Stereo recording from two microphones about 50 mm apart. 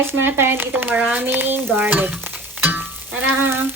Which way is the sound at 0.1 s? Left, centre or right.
Right.